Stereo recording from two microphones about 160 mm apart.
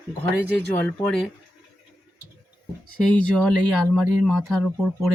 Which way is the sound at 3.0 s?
5° left (ahead or behind).